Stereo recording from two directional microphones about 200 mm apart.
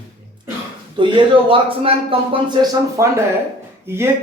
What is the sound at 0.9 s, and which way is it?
Speech, 25° right (ahead or behind).